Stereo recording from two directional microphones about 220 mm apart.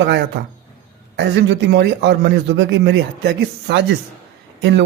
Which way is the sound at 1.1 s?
50° right (ahead or behind).